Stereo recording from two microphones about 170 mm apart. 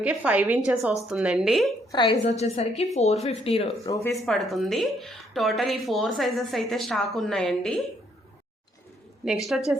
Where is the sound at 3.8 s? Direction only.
20° left (ahead or behind).